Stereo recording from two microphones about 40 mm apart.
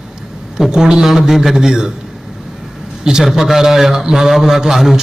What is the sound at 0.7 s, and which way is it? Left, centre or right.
A man's voice, centre.